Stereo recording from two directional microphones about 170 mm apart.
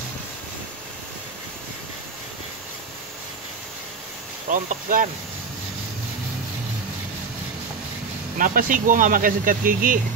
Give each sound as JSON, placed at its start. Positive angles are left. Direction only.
{"t": 4.5, "sound": "speech", "side_deg": -50}
{"t": 8.4, "sound": "speech", "side_deg": -55}